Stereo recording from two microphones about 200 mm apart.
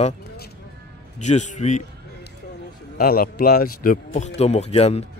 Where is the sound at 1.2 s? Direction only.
35° left (ahead or behind).